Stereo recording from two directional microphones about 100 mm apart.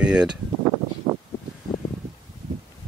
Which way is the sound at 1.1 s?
50° right (ahead or behind).